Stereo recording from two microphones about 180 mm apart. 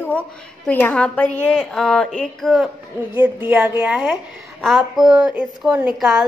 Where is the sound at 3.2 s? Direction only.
10° right (ahead or behind).